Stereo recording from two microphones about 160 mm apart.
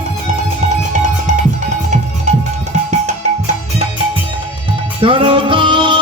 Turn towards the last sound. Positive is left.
turn(degrees=-30)  # may be behind; listen again after turning